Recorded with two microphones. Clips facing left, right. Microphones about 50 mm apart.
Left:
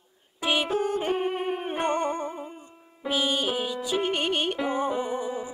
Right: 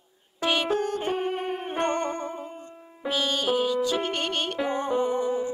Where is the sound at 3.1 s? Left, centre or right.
Centre.